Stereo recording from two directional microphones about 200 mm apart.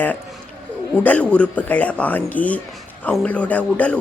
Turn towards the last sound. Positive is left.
turn(degrees=5)  # may be behind; listen again after turning